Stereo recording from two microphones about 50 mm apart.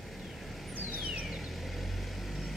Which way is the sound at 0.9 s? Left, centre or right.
Right.